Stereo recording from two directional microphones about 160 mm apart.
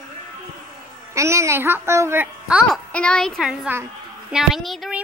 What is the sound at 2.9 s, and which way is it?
A woman's voice, 5° left (ahead or behind).